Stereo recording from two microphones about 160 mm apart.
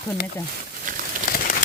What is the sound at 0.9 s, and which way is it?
Bird, 55° right (ahead or behind).